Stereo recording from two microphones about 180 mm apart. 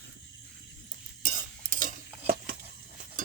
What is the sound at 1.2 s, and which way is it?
Stir, 45° right (ahead or behind).